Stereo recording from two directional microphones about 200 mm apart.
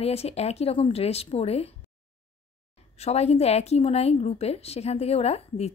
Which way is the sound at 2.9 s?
30° left (ahead or behind).